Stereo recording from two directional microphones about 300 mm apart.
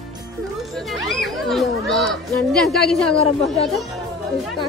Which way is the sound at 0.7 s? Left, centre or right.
Centre.